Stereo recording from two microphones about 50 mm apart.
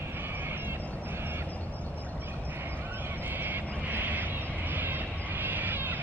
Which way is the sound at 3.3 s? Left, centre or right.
Right.